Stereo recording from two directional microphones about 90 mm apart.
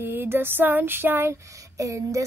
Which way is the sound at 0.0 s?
25° right (ahead or behind).